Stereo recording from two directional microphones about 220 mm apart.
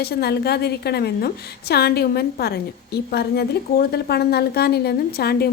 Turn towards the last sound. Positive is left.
turn(degrees=45)  # may be behind; listen again after turning